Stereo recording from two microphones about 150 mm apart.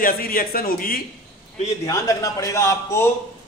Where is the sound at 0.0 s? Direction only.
75° left (ahead or behind).